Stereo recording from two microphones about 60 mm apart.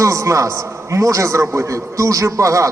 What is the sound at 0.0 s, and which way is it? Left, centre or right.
A man's voice, right.